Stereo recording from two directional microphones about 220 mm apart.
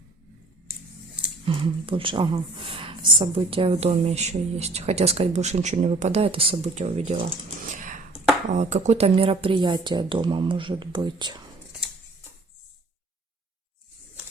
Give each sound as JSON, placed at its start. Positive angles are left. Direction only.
{"t": 1.5, "sound": "a woman's voice", "side_deg": -25}
{"t": 7.7, "sound": "a sound", "side_deg": -35}
{"t": 8.5, "sound": "a woman's voice", "side_deg": -30}